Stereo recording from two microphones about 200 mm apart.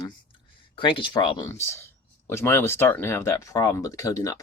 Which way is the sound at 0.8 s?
25° left (ahead or behind).